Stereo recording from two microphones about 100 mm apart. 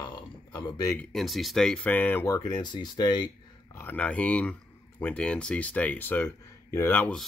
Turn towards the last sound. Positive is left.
turn(degrees=15)  # may be behind; listen again after turning